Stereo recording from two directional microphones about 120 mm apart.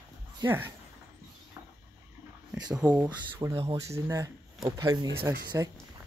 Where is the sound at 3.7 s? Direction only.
25° right (ahead or behind).